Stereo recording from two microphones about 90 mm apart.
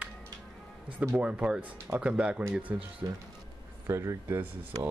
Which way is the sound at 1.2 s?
10° right (ahead or behind).